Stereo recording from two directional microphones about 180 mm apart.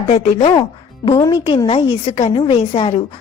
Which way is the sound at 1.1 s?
20° left (ahead or behind).